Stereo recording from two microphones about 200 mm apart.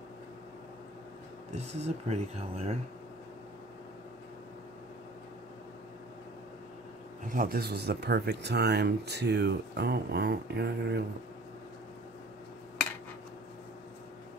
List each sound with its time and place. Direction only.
1.8 s speech: 30° right (ahead or behind)
7.3 s speech: 50° right (ahead or behind)